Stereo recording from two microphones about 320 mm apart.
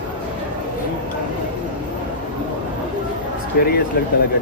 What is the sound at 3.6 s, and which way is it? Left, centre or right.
Speech, left.